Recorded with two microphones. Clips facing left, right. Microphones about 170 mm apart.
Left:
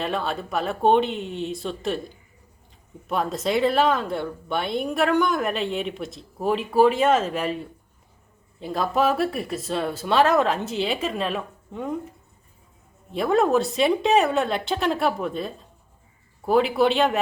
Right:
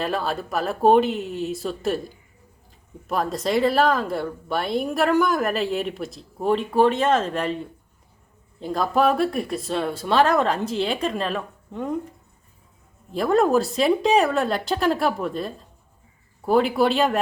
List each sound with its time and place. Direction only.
0.0 s speech: centre (ahead or behind)
3.1 s speech: centre (ahead or behind)